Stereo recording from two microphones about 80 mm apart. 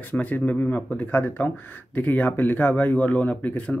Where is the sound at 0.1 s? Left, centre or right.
Centre.